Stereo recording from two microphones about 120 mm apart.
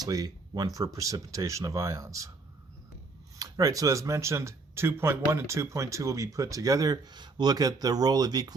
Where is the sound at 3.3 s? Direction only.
30° right (ahead or behind).